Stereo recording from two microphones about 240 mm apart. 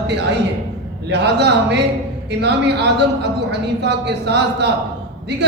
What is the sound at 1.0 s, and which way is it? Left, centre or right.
Speech, right.